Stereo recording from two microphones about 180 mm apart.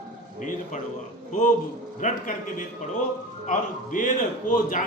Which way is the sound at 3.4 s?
45° left (ahead or behind).